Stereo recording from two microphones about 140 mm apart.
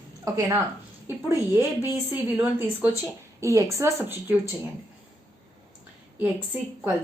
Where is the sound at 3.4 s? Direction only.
20° right (ahead or behind).